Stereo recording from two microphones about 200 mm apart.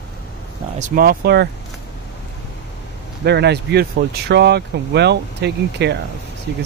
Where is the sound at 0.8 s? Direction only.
45° right (ahead or behind).